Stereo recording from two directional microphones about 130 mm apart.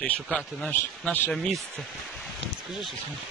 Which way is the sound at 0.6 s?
10° left (ahead or behind).